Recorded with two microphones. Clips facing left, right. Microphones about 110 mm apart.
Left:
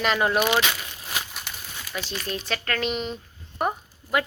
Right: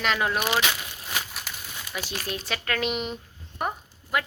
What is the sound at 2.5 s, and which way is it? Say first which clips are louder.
Speech: left 1 dB; 10° right (ahead or behind).